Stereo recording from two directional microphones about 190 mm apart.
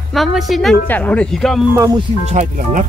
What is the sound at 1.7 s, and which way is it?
Speech, 15° right (ahead or behind).